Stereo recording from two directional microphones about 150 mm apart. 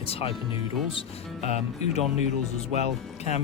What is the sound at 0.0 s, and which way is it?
Speech, 40° left (ahead or behind).